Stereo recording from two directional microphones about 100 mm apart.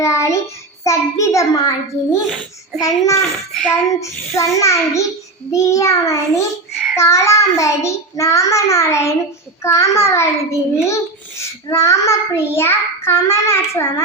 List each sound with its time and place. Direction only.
0.0 s child singing: 30° left (ahead or behind)
0.9 s a child's voice: 30° left (ahead or behind)
2.8 s a child's voice: 30° left (ahead or behind)
3.5 s speech: 5° left (ahead or behind)
4.0 s a child's voice: 30° left (ahead or behind)
6.9 s child singing: 30° left (ahead or behind)